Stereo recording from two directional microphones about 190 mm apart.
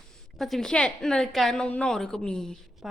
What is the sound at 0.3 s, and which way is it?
A woman's voice, centre (ahead or behind).